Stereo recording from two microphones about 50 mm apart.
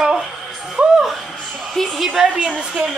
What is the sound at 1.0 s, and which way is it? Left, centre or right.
Music, centre.